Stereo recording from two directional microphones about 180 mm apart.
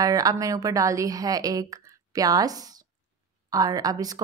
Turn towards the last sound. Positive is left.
turn(degrees=-20)  # may be behind; listen again after turning